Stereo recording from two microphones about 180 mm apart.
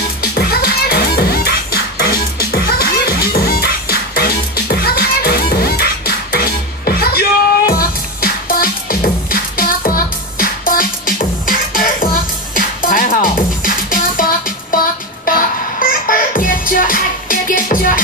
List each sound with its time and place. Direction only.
0.2 s music: 60° left (ahead or behind)